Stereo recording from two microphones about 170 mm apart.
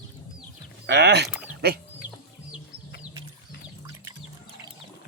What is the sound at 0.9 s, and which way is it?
Speech, 80° right.